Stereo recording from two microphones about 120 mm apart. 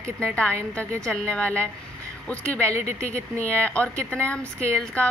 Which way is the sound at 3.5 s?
10° left (ahead or behind).